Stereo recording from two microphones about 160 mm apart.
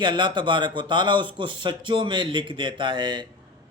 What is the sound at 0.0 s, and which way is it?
A man's voice, 30° right (ahead or behind).